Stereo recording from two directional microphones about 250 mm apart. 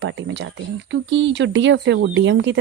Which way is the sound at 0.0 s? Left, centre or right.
Right.